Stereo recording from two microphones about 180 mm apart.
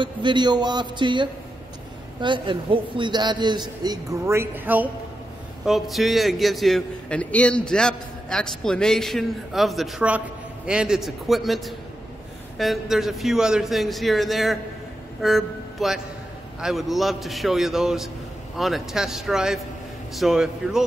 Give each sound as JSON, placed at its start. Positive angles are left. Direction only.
{"t": 0.0, "sound": "a man's voice", "side_deg": -25}
{"t": 5.7, "sound": "a man's voice", "side_deg": 0}